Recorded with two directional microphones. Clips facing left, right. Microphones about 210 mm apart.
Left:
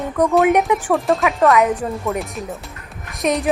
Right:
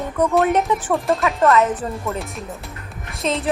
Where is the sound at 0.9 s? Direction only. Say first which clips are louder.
Left 2 dB; centre (ahead or behind).